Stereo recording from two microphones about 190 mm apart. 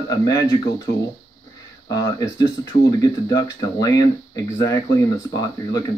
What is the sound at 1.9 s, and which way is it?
Speech, 20° left (ahead or behind).